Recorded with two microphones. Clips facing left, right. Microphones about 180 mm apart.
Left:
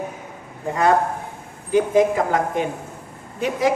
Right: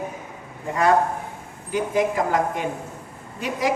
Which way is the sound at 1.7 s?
20° left (ahead or behind).